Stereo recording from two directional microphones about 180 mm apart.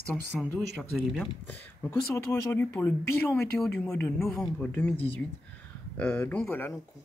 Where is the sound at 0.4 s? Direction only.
Centre (ahead or behind).